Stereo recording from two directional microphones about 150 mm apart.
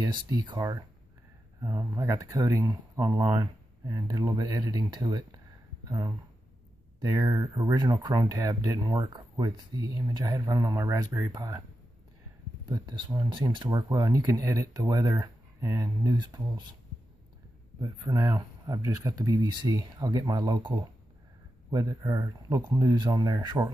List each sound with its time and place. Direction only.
0.3 s speech: 30° right (ahead or behind)
1.6 s speech: 20° right (ahead or behind)
12.6 s speech: 25° right (ahead or behind)
17.7 s speech: 25° right (ahead or behind)